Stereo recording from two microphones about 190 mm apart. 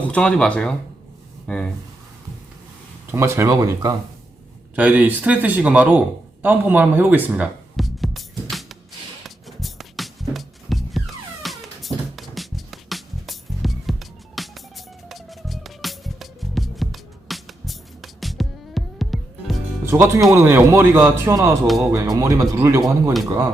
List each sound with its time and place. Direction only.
0.1 s speech: 5° left (ahead or behind)
3.1 s speech: 15° right (ahead or behind)
4.7 s speech: 5° right (ahead or behind)
6.4 s music: 10° right (ahead or behind)
19.8 s speech: 15° right (ahead or behind)